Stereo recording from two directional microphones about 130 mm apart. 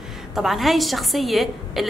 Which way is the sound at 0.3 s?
Centre (ahead or behind).